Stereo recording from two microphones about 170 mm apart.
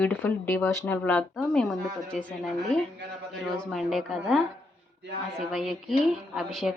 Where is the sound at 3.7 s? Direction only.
Centre (ahead or behind).